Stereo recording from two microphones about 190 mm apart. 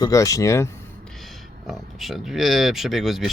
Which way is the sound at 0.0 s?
15° left (ahead or behind).